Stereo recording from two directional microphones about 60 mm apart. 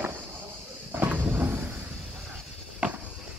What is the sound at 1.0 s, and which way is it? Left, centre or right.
Cupboard open or close, right.